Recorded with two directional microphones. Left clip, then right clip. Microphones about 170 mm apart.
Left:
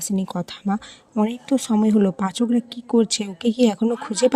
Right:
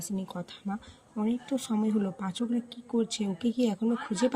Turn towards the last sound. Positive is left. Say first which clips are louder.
# left 10 dB
turn(degrees=45)  # may be behind; listen again after turning